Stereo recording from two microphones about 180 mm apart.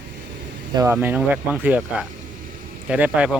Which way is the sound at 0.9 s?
10° right (ahead or behind).